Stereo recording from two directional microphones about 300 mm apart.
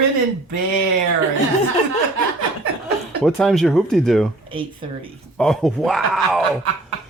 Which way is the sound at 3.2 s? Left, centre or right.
Centre.